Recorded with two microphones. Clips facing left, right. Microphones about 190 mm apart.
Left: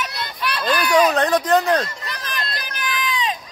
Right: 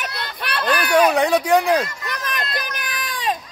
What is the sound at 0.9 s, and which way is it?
Speech, 10° right (ahead or behind).